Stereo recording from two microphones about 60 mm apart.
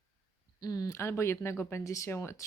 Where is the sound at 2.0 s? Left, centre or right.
Left.